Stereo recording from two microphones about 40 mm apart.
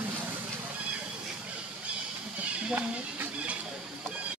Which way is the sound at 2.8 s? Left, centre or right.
Right.